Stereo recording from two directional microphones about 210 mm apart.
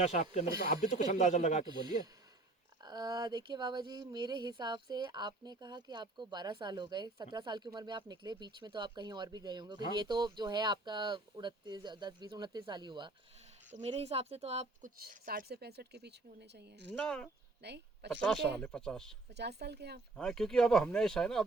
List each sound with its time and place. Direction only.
0.0 s speech: 30° left (ahead or behind)
2.8 s speech: 20° right (ahead or behind); by 16.9 s 55° right (ahead or behind)
16.9 s speech: 5° left (ahead or behind)
17.6 s a sound: 55° right (ahead or behind)
18.1 s speech: 5° left (ahead or behind)
19.3 s speech: 50° right (ahead or behind)
20.1 s speech: 5° left (ahead or behind)